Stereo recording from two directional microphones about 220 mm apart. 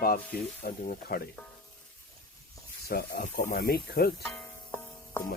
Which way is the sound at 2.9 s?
45° left (ahead or behind).